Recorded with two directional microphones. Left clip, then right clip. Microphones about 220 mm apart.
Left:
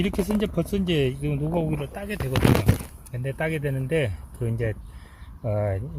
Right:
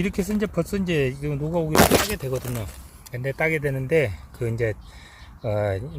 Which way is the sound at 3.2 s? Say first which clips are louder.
Right 4 dB; 10° right (ahead or behind).